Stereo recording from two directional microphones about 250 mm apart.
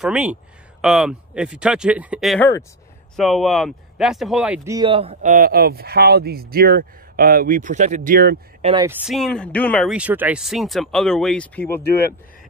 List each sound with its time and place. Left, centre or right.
0.0 s speech: centre; by 8.4 s right
8.8 s speech: centre